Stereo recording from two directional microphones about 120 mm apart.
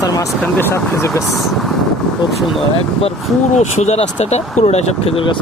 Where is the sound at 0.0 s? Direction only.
30° left (ahead or behind).